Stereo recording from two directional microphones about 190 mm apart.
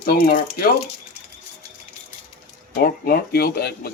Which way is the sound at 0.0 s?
50° left (ahead or behind).